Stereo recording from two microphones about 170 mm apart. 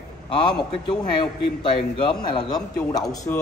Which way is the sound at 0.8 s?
30° left (ahead or behind).